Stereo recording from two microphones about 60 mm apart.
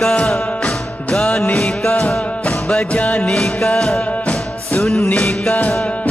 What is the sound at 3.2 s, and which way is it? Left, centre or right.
Music, centre.